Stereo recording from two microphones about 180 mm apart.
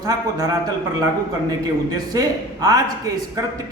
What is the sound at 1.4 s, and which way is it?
A man's voice, 20° right (ahead or behind).